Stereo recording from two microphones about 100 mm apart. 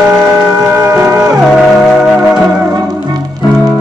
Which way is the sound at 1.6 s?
Centre (ahead or behind).